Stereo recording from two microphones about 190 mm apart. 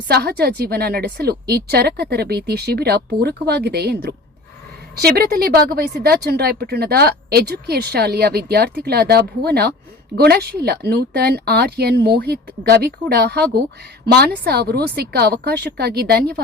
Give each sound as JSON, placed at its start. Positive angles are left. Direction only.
{"t": 0.1, "sound": "a woman's voice", "side_deg": -55}